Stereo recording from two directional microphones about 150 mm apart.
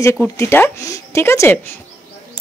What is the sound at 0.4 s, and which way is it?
Speech, 20° left (ahead or behind).